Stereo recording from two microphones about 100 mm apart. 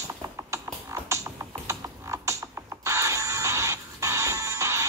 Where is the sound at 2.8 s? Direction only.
30° right (ahead or behind).